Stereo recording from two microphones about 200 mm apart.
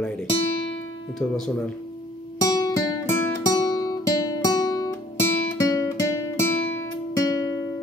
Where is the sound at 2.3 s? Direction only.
20° left (ahead or behind).